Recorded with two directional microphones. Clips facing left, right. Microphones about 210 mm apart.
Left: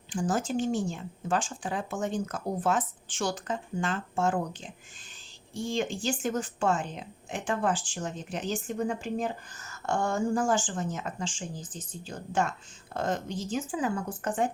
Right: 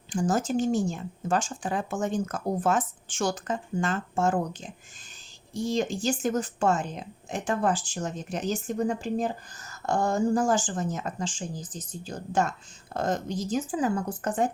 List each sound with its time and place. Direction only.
0.1 s speech: 40° right (ahead or behind)
5.5 s speech: 40° right (ahead or behind)